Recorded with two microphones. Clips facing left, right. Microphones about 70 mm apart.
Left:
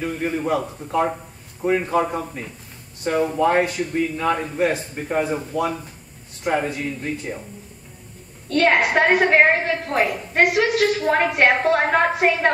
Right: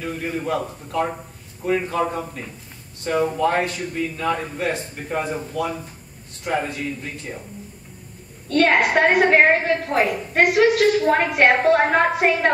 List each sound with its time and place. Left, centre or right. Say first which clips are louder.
0.0 s a man's voice: left 3 dB; centre
8.5 s a woman's voice: even; centre